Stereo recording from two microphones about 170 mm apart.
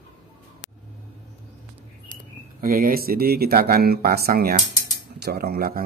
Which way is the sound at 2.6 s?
55° right (ahead or behind).